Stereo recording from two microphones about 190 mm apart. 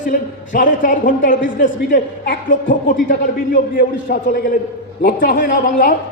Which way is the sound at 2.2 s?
60° left (ahead or behind).